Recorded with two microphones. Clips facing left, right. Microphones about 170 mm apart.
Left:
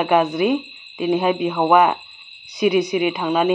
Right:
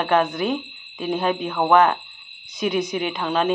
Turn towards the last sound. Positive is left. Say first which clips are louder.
# left 4 dB
turn(degrees=10)  # may be behind; listen again after turning